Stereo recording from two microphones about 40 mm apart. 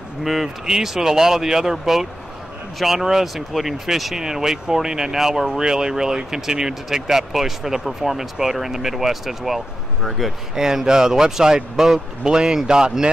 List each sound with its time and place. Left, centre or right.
0.2 s speech: centre
10.5 s speech: centre